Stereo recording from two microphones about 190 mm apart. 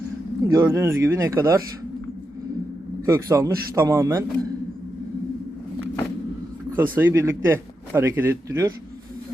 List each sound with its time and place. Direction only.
0.4 s a man's voice: 15° right (ahead or behind)
3.1 s a man's voice: 15° right (ahead or behind)
6.7 s a man's voice: 10° right (ahead or behind)